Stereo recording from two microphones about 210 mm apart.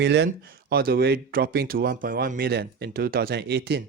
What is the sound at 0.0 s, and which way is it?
Speech, 55° right (ahead or behind).